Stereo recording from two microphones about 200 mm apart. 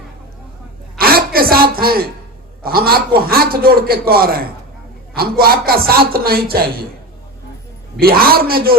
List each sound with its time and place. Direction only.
0.9 s a sound: 50° right (ahead or behind)
1.7 s a man's voice: 50° right (ahead or behind)
7.9 s a man's voice: 50° right (ahead or behind)